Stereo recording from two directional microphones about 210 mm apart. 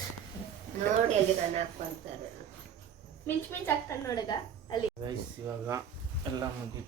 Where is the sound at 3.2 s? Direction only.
10° left (ahead or behind).